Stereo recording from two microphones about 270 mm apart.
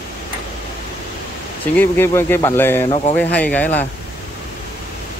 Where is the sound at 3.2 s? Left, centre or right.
Centre.